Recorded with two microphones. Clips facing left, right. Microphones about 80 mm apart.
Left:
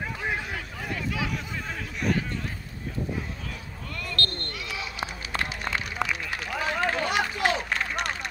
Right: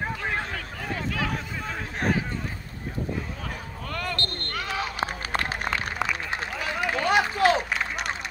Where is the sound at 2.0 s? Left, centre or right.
Right.